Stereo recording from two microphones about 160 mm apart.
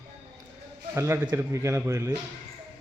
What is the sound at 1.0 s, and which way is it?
A man's voice, 15° right (ahead or behind).